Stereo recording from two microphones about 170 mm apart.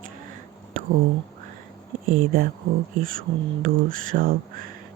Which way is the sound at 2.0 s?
60° right (ahead or behind).